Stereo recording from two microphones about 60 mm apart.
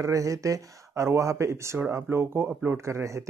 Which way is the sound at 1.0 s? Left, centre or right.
Right.